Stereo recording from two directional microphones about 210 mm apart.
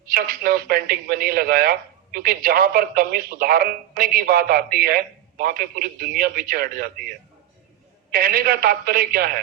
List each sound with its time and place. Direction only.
0.0 s speech: 45° right (ahead or behind)
8.1 s speech: 45° right (ahead or behind)